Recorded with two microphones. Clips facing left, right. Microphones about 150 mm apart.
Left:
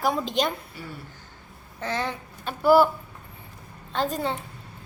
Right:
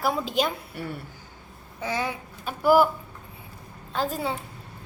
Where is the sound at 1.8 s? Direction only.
10° right (ahead or behind).